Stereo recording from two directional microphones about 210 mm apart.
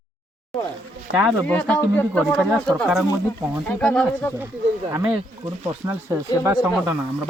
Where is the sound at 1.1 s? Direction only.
65° right (ahead or behind).